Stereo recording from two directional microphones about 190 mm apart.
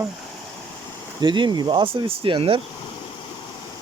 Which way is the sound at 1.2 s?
25° right (ahead or behind).